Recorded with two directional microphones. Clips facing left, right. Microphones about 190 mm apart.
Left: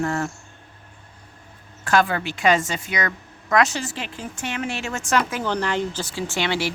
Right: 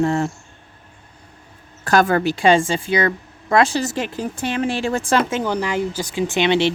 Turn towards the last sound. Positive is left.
turn(degrees=-20)  # may be behind; listen again after turning